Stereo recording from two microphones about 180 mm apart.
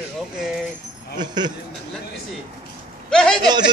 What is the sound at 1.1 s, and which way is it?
Speech, 25° right (ahead or behind).